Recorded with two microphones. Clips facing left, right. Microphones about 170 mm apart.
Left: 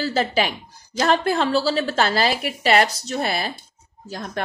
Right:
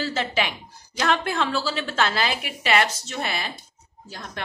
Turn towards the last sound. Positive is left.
turn(degrees=45)  # may be behind; listen again after turning